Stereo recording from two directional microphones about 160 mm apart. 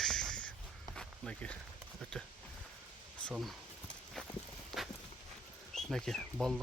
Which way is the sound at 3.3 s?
Centre (ahead or behind).